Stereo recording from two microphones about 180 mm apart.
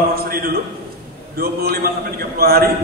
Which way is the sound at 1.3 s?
60° right (ahead or behind).